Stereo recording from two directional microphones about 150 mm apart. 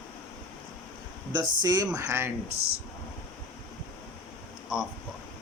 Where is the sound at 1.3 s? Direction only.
25° right (ahead or behind).